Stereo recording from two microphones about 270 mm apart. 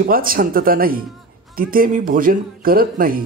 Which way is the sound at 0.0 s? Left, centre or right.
Right.